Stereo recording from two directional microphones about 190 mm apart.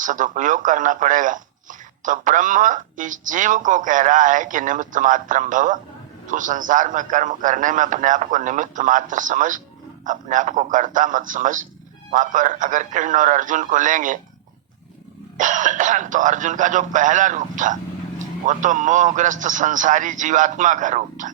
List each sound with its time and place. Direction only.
0.0 s speech: 40° right (ahead or behind)
15.4 s a man's voice: 40° right (ahead or behind)